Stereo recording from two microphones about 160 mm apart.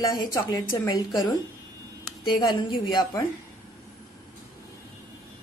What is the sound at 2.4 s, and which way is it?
Speech, 30° left (ahead or behind).